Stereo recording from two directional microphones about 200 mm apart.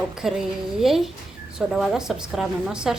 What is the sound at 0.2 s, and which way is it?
A woman's voice, centre (ahead or behind).